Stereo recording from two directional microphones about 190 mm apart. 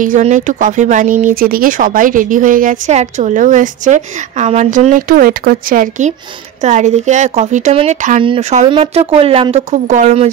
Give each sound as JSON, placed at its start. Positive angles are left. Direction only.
{"t": 0.0, "sound": "speech", "side_deg": -40}